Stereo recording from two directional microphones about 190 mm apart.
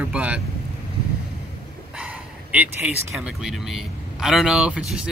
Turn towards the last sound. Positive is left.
turn(degrees=-5)  # may be behind; listen again after turning